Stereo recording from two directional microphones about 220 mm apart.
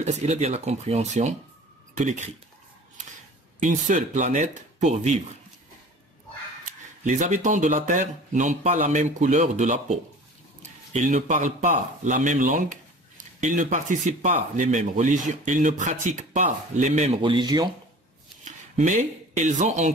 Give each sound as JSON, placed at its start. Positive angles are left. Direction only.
{"t": 0.0, "sound": "speech", "side_deg": -30}
{"t": 7.1, "sound": "speech", "side_deg": -35}
{"t": 18.4, "sound": "speech", "side_deg": -35}